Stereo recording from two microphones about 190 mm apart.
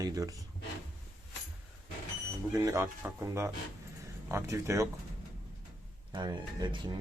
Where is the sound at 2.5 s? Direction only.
15° right (ahead or behind).